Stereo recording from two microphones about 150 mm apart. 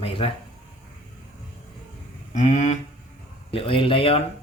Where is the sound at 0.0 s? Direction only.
40° left (ahead or behind).